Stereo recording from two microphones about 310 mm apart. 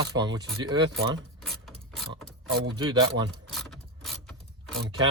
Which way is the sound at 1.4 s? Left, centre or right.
Centre.